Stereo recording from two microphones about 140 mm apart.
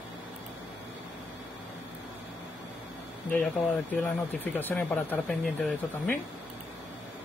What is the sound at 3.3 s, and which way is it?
Speech, 10° left (ahead or behind).